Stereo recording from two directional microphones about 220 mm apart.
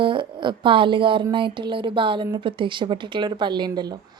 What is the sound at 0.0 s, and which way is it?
Speech, 20° right (ahead or behind).